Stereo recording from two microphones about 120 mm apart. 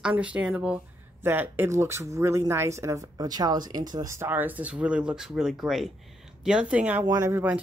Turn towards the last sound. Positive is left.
turn(degrees=-15)  # may be behind; listen again after turning